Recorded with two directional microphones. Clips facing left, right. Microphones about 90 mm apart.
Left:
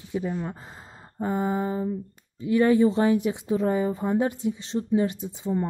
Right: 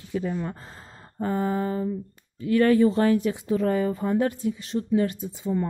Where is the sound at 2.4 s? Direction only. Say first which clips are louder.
Right 1 dB; 20° left (ahead or behind).